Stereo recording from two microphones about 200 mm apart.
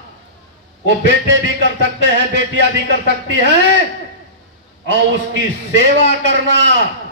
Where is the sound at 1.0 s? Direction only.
60° right (ahead or behind).